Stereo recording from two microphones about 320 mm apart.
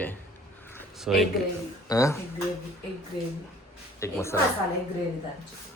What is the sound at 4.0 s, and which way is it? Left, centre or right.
Speech, centre.